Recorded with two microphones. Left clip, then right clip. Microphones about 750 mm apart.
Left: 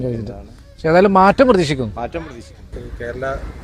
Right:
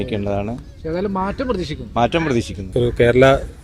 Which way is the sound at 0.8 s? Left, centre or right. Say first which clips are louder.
Left 12 dB; left.